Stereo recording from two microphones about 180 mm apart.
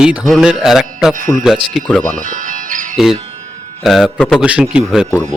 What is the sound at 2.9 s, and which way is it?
Speech, centre (ahead or behind).